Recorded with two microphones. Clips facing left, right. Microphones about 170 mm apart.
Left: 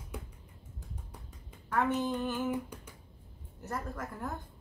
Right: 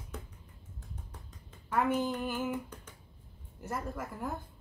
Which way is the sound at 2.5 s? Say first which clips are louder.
Left 2 dB; 10° left (ahead or behind).